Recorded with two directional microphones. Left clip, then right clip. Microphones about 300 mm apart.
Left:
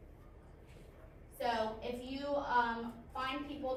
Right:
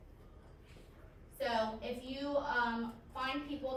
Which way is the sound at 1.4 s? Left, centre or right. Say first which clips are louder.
Even; centre.